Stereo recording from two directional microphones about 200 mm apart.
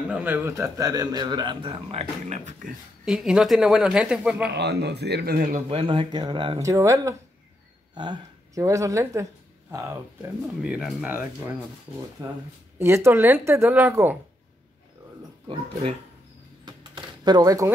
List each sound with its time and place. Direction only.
0.1 s a man's voice: 10° right (ahead or behind); by 2.7 s 35° right (ahead or behind)
3.1 s speech: 5° right (ahead or behind)
4.6 s speech: 55° right (ahead or behind)
5.7 s a man's voice: 25° right (ahead or behind)
10.6 s speech: 5° right (ahead or behind)
12.7 s a woman's voice: 15° right (ahead or behind)
16.6 s a sound: 20° right (ahead or behind)